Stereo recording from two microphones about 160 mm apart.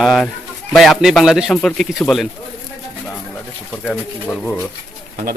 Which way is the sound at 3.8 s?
10° left (ahead or behind).